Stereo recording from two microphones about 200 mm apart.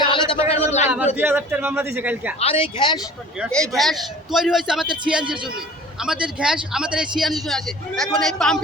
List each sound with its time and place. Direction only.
0.0 s a sound: 30° left (ahead or behind)
1.1 s a man's voice: 10° right (ahead or behind)
2.4 s speech: 30° left (ahead or behind)
3.4 s a man's voice: centre (ahead or behind)